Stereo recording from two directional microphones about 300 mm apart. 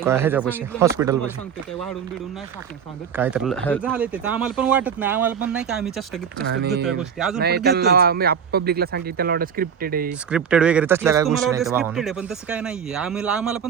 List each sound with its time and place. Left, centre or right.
0.0 s speech: centre
3.2 s speech: centre
3.9 s speech: centre
6.4 s speech: right
6.8 s speech: centre
7.3 s speech: right
10.1 s speech: centre